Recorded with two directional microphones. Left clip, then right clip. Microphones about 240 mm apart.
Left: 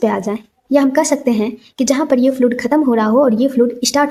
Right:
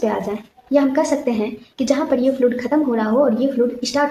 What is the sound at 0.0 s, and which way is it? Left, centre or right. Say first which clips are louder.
A woman's voice: left 4 dB; left.